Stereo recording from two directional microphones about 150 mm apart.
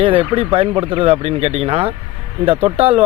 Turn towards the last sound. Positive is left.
turn(degrees=-40)  # may be behind; listen again after turning